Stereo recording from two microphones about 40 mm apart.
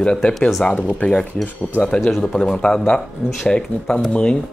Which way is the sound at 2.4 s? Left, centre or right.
Centre.